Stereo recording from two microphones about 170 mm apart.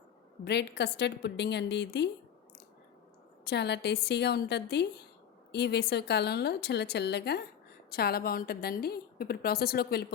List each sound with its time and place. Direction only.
0.4 s a woman's voice: 80° left
3.4 s a woman's voice: 80° left
7.9 s a woman's voice: 65° left (ahead or behind)